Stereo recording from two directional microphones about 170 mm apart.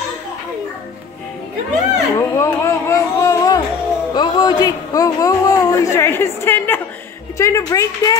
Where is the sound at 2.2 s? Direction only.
15° left (ahead or behind).